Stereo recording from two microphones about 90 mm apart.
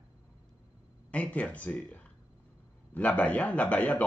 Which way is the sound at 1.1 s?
15° left (ahead or behind).